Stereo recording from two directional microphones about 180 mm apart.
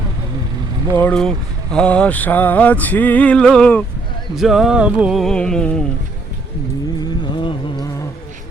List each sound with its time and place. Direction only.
0.9 s a sound: 5° left (ahead or behind)
4.4 s speech: centre (ahead or behind)
7.0 s music: 25° left (ahead or behind)